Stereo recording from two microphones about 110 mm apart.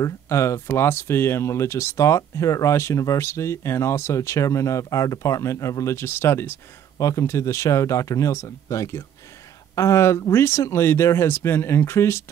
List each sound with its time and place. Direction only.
0.0 s speech: 25° left (ahead or behind)